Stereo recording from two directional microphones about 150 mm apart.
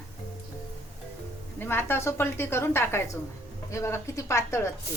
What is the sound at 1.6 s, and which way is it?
A woman's voice, 15° left (ahead or behind).